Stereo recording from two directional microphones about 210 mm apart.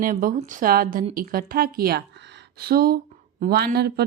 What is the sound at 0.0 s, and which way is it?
A woman's voice, 40° right (ahead or behind).